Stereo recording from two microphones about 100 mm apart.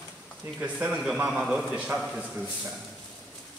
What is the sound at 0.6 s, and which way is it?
A man's voice, 15° right (ahead or behind).